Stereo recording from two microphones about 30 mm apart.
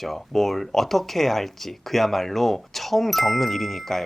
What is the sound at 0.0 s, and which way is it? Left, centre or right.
Speech, centre.